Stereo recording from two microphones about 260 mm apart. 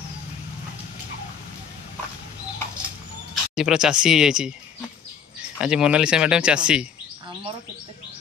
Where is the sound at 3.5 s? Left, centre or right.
Centre.